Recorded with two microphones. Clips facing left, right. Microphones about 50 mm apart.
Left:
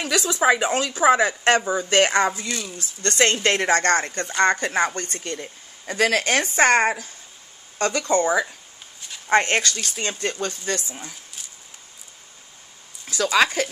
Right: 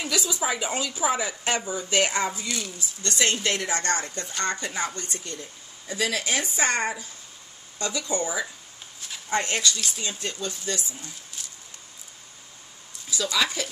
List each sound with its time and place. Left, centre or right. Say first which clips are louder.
0.0 s speech: left 7 dB; left
1.6 s speech: left 7 dB; left
1.9 s speech: left 5 dB; left
11.4 s a sound: right 3 dB; centre
13.1 s speech: left 7 dB; left